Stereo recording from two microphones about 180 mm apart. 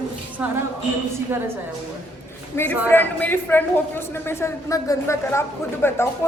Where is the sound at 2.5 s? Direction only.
10° left (ahead or behind).